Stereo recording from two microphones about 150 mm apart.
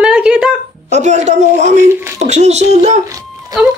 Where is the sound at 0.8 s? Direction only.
50° right (ahead or behind).